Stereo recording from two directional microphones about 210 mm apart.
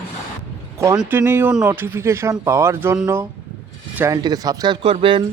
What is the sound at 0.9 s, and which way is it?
Speech, 10° right (ahead or behind).